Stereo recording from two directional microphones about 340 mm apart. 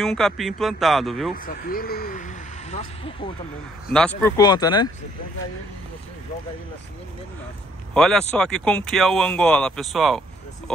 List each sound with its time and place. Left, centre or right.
0.0 s speech: centre
1.3 s speech: left
3.9 s speech: centre
7.9 s speech: centre